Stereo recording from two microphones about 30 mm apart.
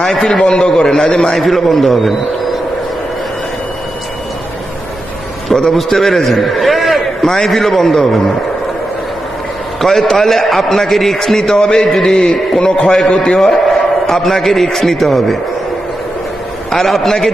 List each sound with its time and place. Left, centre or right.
0.1 s a man's voice: centre
0.4 s a man's voice: left
1.1 s a man's voice: centre
5.7 s a man's voice: centre
9.8 s a man's voice: centre
11.5 s a man's voice: left
11.9 s a man's voice: centre
12.2 s a man's voice: left
13.7 s a man's voice: centre
16.7 s a man's voice: centre